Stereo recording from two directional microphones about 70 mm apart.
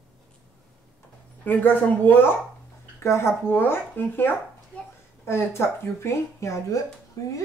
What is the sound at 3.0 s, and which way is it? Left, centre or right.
A woman's voice, left.